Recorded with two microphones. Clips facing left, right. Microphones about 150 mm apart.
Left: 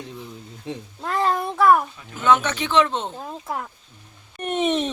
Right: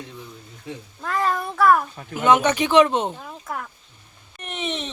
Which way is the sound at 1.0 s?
25° left (ahead or behind).